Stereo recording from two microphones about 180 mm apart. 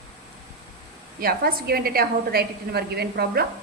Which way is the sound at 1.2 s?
55° right (ahead or behind).